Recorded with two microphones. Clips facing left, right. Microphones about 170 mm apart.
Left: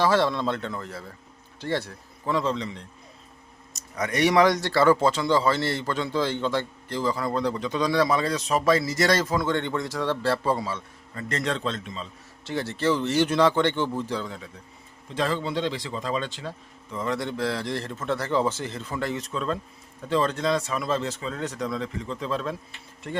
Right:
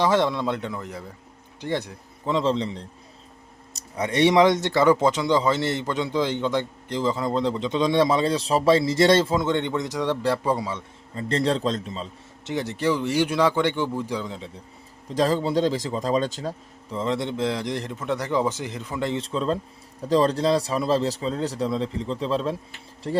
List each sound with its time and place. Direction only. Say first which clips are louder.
0.0 s speech: right 1 dB; 20° right (ahead or behind); by 12.0 s 35° right (ahead or behind)
12.5 s speech: right 1 dB; 15° right (ahead or behind)
15.1 s speech: right 5 dB; 40° right (ahead or behind)
17.0 s speech: right 2 dB; 25° right (ahead or behind)